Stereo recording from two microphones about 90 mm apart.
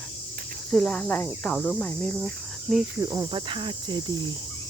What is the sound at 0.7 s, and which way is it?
Speech, 15° left (ahead or behind).